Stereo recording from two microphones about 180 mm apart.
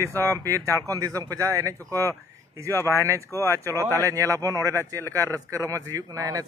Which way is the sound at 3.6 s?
15° right (ahead or behind).